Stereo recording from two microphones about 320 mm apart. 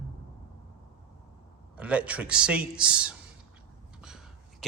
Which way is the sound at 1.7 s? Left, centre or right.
Centre.